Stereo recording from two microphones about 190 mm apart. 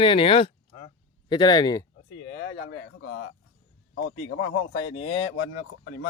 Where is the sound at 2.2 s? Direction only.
70° left (ahead or behind); by 3.3 s 90° left.